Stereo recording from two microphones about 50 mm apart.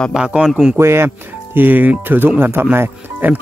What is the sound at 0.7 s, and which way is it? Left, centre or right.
Speech, right.